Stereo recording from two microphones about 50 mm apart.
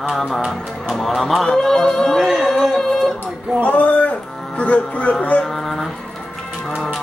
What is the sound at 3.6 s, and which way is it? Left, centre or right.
Speech, left.